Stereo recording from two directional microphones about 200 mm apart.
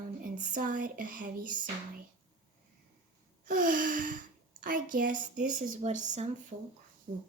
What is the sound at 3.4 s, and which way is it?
Gasp, 40° right (ahead or behind).